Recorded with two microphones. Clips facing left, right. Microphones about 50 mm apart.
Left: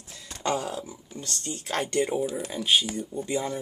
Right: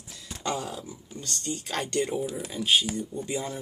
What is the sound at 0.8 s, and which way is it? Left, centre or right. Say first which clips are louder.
Speech: left 1 dB; centre.